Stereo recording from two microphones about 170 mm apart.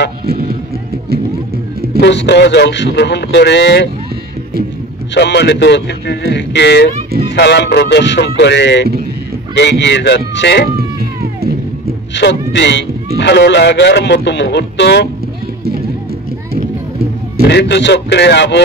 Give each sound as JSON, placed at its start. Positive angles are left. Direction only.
{"t": 0.3, "sound": "music", "side_deg": -60}
{"t": 2.0, "sound": "a man's voice", "side_deg": 90}
{"t": 5.1, "sound": "a man's voice", "side_deg": 90}
{"t": 12.2, "sound": "a man's voice", "side_deg": 90}
{"t": 17.5, "sound": "a man's voice", "side_deg": 85}